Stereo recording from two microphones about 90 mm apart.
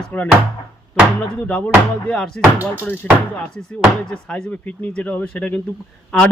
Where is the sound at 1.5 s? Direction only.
15° left (ahead or behind).